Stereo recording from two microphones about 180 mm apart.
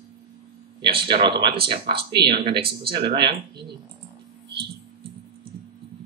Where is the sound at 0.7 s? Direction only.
30° right (ahead or behind).